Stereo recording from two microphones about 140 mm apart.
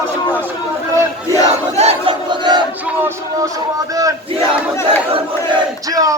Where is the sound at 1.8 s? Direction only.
50° right (ahead or behind).